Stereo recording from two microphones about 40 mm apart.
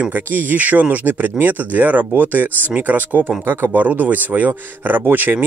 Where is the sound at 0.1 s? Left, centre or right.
Right.